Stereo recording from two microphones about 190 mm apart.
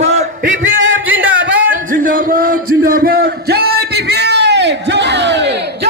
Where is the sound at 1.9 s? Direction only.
45° right (ahead or behind).